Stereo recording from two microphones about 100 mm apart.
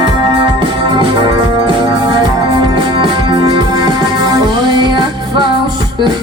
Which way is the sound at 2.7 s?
50° right (ahead or behind).